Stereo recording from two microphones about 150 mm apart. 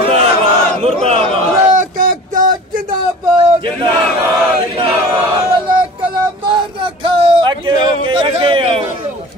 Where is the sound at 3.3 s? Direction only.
35° right (ahead or behind).